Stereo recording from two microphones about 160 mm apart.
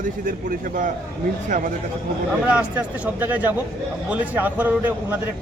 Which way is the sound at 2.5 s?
10° right (ahead or behind).